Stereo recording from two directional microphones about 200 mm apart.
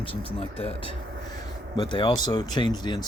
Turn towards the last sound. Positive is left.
turn(degrees=20)  # may be behind; listen again after turning